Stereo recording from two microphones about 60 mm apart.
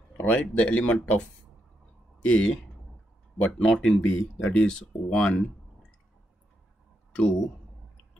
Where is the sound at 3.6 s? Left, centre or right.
Centre.